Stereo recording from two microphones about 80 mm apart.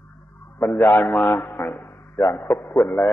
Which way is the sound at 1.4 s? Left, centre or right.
Left.